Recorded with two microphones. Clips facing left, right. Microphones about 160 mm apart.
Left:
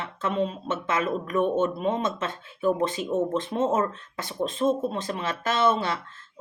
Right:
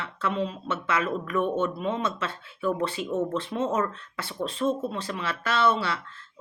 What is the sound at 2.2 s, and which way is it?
A woman's voice, 20° left (ahead or behind).